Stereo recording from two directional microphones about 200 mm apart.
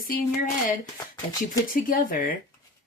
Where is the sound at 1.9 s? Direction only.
45° left (ahead or behind).